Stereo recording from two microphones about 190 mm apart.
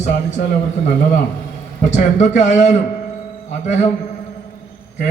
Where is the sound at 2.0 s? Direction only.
40° left (ahead or behind).